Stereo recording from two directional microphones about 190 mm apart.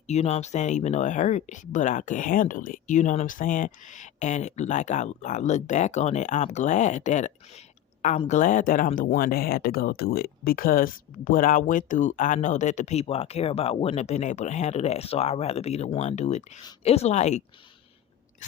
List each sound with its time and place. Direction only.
0.1 s speech: 35° left (ahead or behind)